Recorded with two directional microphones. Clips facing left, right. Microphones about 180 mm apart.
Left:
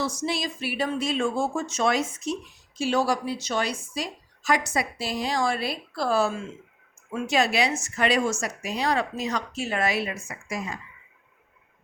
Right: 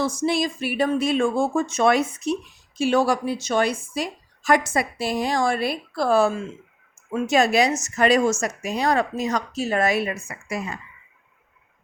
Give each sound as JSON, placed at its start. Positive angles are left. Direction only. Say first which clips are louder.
{"t": 0.0, "sound": "speech", "louder": "right 6 dB", "side_deg": -50}